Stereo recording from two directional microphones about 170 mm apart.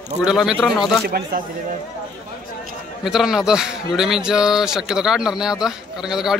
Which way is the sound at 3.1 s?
Centre (ahead or behind).